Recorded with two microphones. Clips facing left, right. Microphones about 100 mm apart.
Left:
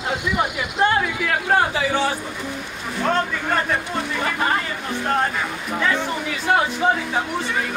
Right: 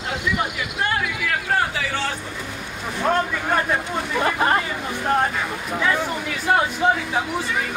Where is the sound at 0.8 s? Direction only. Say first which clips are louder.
Left 5 dB; 30° left (ahead or behind).